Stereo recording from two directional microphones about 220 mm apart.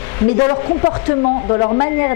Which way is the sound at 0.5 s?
30° left (ahead or behind).